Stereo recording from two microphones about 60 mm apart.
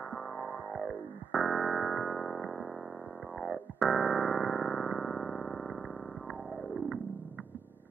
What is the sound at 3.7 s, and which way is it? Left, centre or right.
Music, centre.